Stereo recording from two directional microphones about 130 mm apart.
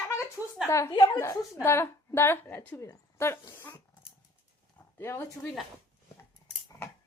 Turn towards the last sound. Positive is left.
turn(degrees=20)  # may be behind; listen again after turning